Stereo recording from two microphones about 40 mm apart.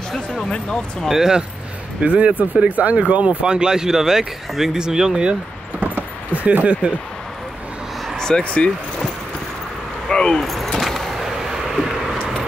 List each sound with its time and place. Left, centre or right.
0.1 s speech: centre
1.0 s speech: centre
2.0 s speech: right
3.4 s speech: right
5.8 s vehicle: right
8.2 s a sound: centre
8.5 s speech: left
10.0 s keys jangling: left
10.4 s keys jangling: centre
10.8 s vehicle: centre
11.1 s vehicle: centre